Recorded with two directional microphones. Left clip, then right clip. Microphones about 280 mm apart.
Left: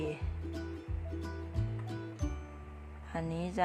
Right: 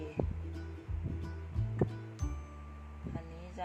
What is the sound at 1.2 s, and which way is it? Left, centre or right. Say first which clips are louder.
Music: left 5 dB; centre.